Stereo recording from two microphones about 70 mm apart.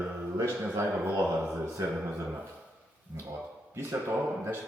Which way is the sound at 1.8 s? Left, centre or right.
Right.